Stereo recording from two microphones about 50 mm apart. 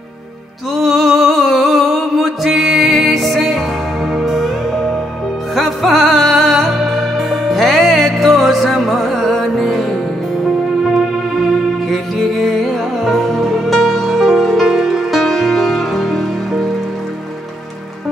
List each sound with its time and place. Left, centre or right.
0.8 s music: centre
1.1 s a sound: centre
2.4 s music: centre
14.7 s music: centre